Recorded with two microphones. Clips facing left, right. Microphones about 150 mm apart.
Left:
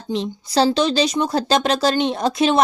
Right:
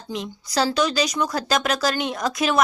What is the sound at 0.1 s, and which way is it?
Speech, 30° left (ahead or behind).